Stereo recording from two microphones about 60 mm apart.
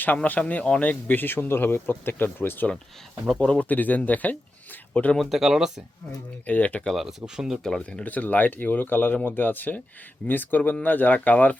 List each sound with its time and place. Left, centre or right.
0.3 s speech: left
3.3 s speech: centre
3.7 s speech: left
5.1 s speech: centre
6.4 s speech: left
6.9 s speech: centre
7.9 s speech: left